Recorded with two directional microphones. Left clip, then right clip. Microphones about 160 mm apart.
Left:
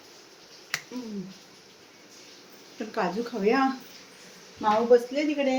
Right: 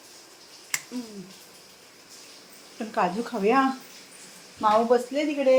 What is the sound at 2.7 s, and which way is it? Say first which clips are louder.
Speech: right 3 dB; 25° right (ahead or behind).